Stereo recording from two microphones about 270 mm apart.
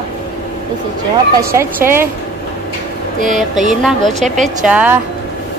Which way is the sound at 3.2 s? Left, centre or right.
Right.